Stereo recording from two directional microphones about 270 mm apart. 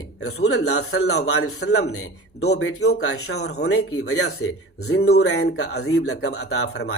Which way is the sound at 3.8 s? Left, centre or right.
Left.